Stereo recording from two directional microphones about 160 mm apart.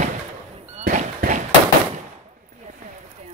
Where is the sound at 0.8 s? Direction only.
55° right (ahead or behind).